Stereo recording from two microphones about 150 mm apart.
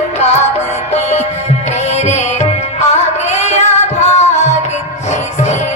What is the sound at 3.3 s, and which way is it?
Music, 50° left (ahead or behind).